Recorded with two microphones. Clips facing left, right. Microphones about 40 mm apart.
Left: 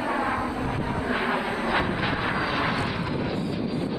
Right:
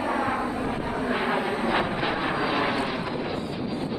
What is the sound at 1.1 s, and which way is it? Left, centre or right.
Vehicle, centre.